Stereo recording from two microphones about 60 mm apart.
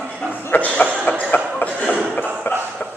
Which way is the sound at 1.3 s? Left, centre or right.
Left.